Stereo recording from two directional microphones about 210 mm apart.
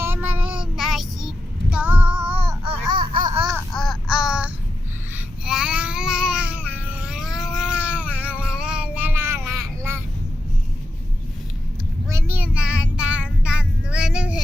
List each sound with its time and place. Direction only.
0.0 s child singing: 10° right (ahead or behind)
3.2 s laughter: 20° right (ahead or behind)
3.5 s babbling: centre (ahead or behind)
6.6 s a sound: 5° right (ahead or behind)
9.5 s vehicle: 15° right (ahead or behind)
12.0 s child singing: 10° right (ahead or behind)